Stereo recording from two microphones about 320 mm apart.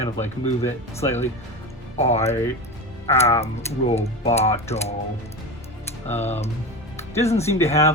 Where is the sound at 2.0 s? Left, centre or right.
Centre.